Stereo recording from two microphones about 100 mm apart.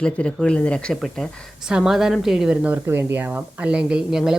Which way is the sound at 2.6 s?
20° right (ahead or behind).